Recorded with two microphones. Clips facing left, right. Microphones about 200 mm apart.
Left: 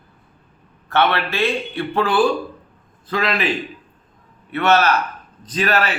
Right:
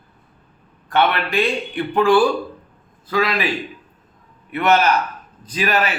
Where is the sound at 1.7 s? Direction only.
15° right (ahead or behind).